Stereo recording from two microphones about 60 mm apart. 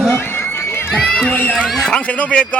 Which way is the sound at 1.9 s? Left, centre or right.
Left.